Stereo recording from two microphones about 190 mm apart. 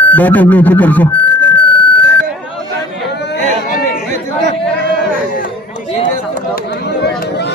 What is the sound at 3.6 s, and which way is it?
Chatter, 50° left (ahead or behind).